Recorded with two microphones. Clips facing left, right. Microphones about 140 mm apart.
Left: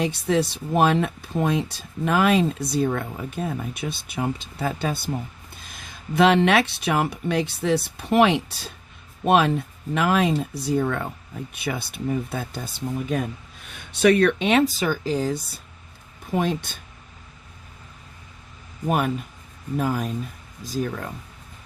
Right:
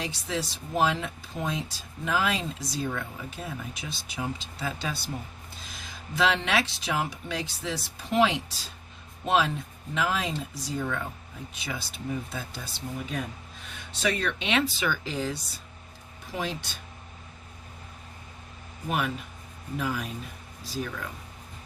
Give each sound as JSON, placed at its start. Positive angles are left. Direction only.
{"t": 0.0, "sound": "speech", "side_deg": 60}
{"t": 13.9, "sound": "speech", "side_deg": 60}
{"t": 16.3, "sound": "speech", "side_deg": 50}
{"t": 18.9, "sound": "speech", "side_deg": 45}